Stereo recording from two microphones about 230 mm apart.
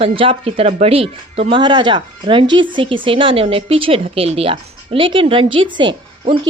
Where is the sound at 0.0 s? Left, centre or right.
Right.